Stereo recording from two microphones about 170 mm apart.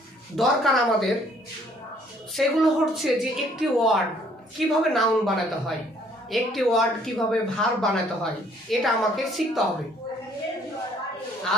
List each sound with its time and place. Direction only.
0.3 s speech: centre (ahead or behind)
2.3 s speech: centre (ahead or behind)